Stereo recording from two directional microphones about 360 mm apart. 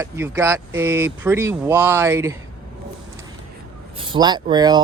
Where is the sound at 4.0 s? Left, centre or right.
Centre.